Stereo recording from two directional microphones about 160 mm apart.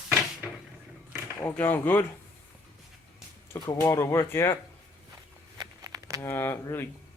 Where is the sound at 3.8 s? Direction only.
20° left (ahead or behind).